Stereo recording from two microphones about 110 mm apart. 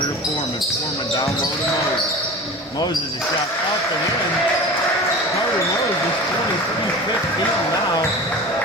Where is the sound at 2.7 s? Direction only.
40° left (ahead or behind).